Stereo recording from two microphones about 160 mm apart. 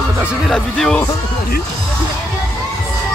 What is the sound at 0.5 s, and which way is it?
Speech, 5° left (ahead or behind).